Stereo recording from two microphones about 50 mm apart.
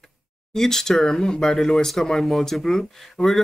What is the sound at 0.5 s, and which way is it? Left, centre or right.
Speech, centre.